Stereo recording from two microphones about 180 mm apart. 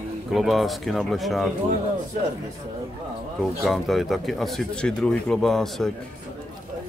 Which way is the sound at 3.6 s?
Centre (ahead or behind).